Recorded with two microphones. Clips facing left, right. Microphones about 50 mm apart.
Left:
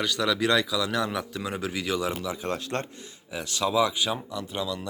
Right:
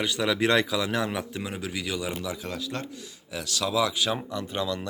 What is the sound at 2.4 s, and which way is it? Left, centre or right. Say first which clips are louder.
Speech: left 3 dB; left.